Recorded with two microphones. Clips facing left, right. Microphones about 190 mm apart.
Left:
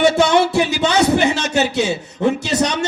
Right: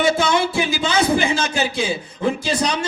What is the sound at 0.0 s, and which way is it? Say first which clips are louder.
Speech: left 4 dB; 70° left (ahead or behind).